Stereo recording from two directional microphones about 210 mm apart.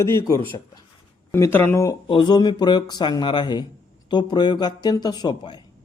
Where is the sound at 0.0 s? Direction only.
15° left (ahead or behind).